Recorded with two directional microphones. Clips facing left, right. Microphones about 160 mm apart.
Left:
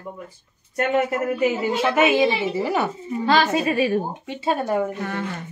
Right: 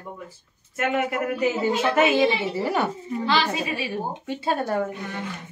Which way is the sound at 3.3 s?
50° left (ahead or behind).